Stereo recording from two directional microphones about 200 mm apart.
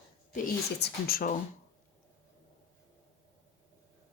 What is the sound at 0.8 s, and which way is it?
Speech, 50° left (ahead or behind).